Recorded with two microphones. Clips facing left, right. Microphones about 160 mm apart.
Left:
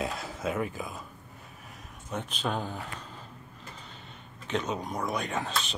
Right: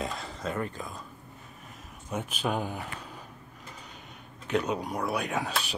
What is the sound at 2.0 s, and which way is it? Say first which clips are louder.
Speech: right 2 dB; 10° right (ahead or behind).